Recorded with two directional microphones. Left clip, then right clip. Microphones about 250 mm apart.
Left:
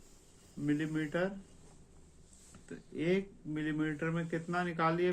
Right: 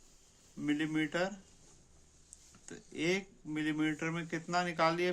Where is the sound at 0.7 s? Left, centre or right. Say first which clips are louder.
Right 1 dB; right.